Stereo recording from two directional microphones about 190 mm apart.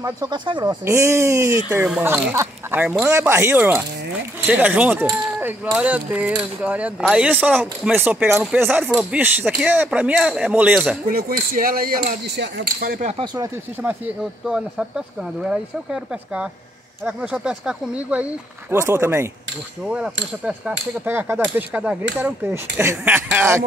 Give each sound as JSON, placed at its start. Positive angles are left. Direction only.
{"t": 0.0, "sound": "speech", "side_deg": -20}
{"t": 11.1, "sound": "speech", "side_deg": -50}
{"t": 13.2, "sound": "speech", "side_deg": -25}
{"t": 13.8, "sound": "speech", "side_deg": -5}